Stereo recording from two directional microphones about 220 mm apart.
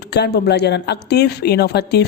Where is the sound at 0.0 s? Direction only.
50° left (ahead or behind).